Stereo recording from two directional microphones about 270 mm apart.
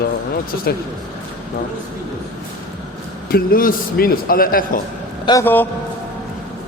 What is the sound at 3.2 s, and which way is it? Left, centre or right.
A man's voice, left.